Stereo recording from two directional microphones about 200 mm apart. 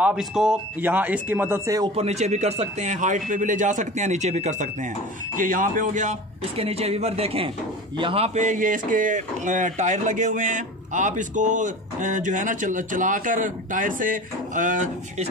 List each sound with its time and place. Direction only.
0.0 s speech: 5° right (ahead or behind)
2.0 s speech: 35° right (ahead or behind)